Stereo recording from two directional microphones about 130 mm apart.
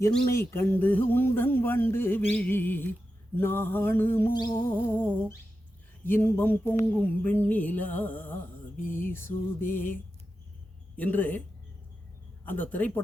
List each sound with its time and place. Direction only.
0.3 s speech: 20° left (ahead or behind)
12.5 s speech: 15° left (ahead or behind)